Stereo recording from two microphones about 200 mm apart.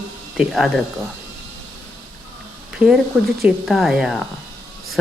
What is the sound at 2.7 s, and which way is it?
Speech, 5° right (ahead or behind).